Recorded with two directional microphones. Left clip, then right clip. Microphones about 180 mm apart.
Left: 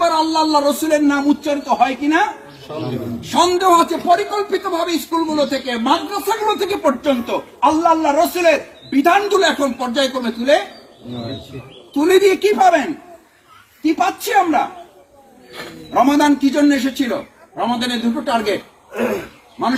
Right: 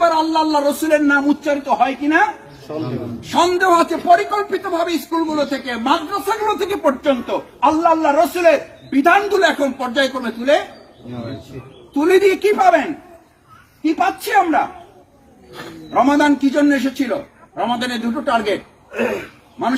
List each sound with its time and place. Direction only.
0.0 s a sound: 5° right (ahead or behind)
0.9 s a man's voice: centre (ahead or behind)
11.9 s a man's voice: 10° right (ahead or behind)
15.9 s a man's voice: centre (ahead or behind)
18.9 s throat clearing: 65° left (ahead or behind)